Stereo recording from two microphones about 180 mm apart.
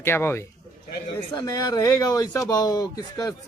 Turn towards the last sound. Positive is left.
turn(degrees=20)  # may be behind; listen again after turning